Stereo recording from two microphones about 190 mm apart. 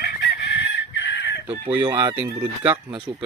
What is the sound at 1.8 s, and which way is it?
Speech, 20° right (ahead or behind).